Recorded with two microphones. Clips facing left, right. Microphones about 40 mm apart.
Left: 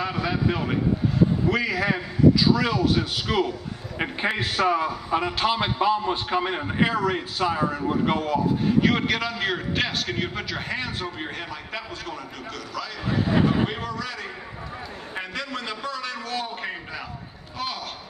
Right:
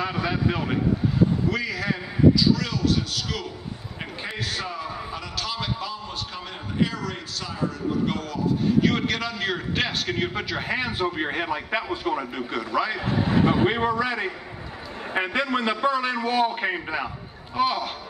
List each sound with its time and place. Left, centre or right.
0.0 s a man's voice: centre
1.5 s a man's voice: centre
8.8 s a man's voice: centre